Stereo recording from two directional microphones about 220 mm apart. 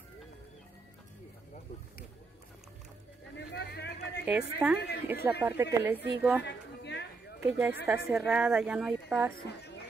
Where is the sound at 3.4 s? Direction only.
50° left (ahead or behind).